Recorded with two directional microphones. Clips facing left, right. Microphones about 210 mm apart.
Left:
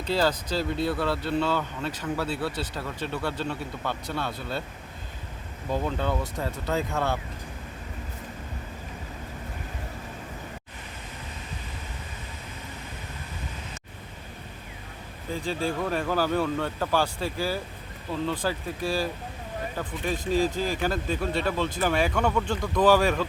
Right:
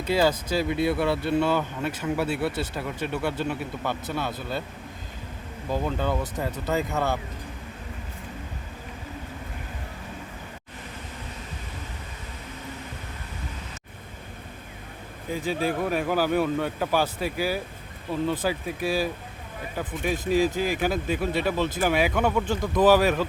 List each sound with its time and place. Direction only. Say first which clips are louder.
0.0 s a man's voice: right 3 dB; 10° right (ahead or behind)
5.7 s speech: right 1 dB; 5° right (ahead or behind)
15.3 s a man's voice: right 2 dB; 10° right (ahead or behind)